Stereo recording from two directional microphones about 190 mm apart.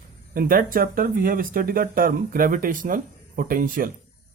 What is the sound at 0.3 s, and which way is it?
Speech, 50° right (ahead or behind).